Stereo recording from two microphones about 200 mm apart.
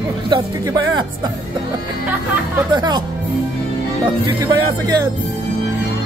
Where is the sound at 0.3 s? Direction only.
20° right (ahead or behind).